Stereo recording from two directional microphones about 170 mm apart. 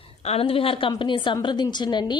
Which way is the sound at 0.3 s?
35° left (ahead or behind).